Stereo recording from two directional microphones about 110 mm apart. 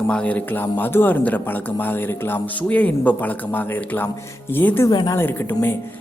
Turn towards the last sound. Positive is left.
turn(degrees=20)  # may be behind; listen again after turning